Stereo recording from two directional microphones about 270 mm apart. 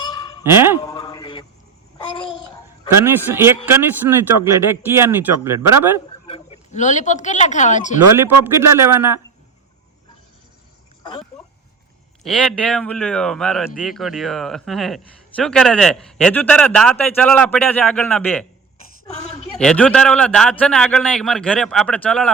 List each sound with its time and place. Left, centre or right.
0.0 s honk: centre
0.4 s speech: centre
0.8 s a sound: centre
2.9 s speech: centre
6.2 s speech: left
8.1 s speech: centre
11.0 s a sound: centre
12.2 s speech: centre
19.5 s speech: centre